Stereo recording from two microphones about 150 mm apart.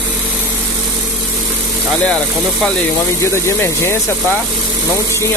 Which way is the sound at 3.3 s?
20° left (ahead or behind).